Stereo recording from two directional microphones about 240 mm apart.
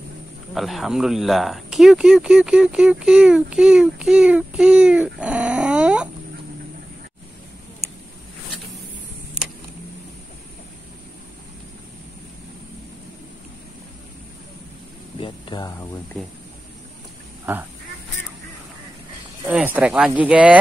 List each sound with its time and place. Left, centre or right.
0.6 s speech: centre
15.1 s a sound: centre
17.5 s speech: centre
19.4 s speech: centre